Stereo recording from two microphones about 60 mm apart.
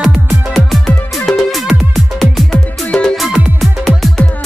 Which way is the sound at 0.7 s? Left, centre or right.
Centre.